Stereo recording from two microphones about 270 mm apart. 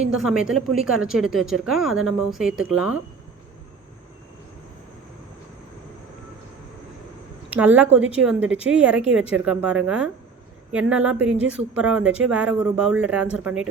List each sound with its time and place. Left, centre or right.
0.2 s speech: centre
7.5 s speech: centre